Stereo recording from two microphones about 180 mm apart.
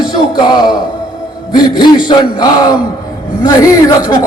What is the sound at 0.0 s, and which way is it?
Music, 25° left (ahead or behind).